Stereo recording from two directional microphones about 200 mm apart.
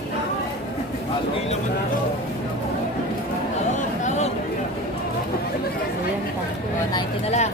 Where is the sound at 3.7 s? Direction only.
35° left (ahead or behind).